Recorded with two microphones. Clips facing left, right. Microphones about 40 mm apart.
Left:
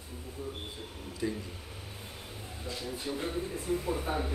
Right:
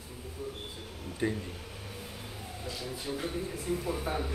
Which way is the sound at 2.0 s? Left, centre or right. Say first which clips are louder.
Right 2 dB; right.